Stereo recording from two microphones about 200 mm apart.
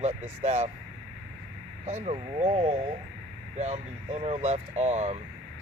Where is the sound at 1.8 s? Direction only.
35° right (ahead or behind).